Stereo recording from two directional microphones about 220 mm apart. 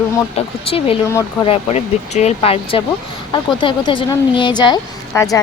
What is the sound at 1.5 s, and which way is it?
A woman's voice, 30° left (ahead or behind).